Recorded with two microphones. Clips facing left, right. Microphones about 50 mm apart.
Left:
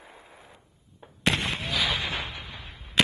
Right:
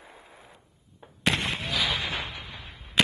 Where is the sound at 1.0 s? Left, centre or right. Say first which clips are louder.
Even; centre.